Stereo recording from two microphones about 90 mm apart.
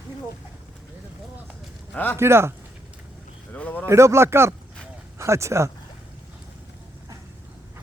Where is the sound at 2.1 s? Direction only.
30° right (ahead or behind).